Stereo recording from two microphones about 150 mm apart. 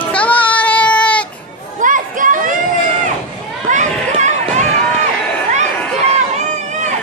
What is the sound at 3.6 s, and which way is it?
Run, 55° right (ahead or behind).